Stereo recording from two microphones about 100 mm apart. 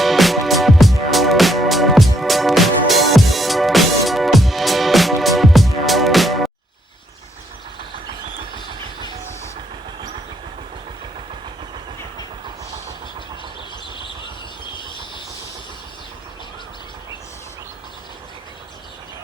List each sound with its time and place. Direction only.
0.0 s music: centre (ahead or behind)
14.8 s vehicle: 50° left (ahead or behind)